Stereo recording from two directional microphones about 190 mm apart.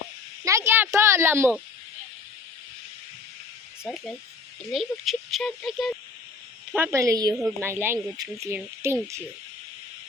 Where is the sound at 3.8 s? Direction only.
Centre (ahead or behind).